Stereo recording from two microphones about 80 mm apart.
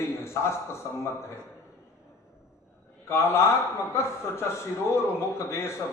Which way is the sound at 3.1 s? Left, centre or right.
Left.